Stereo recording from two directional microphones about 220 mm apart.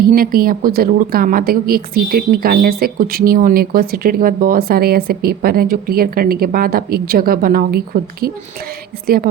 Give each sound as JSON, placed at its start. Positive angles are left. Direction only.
{"t": 0.0, "sound": "a woman's voice", "side_deg": -40}